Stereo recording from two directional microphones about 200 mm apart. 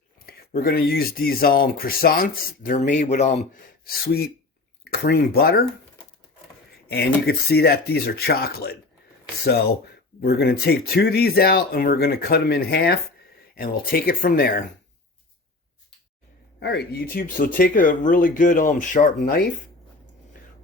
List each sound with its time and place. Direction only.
0.2 s speech: 50° left (ahead or behind)
3.8 s speech: 50° left (ahead or behind)
6.8 s speech: 55° left (ahead or behind)
10.2 s speech: 50° left (ahead or behind)
16.6 s speech: 55° left (ahead or behind)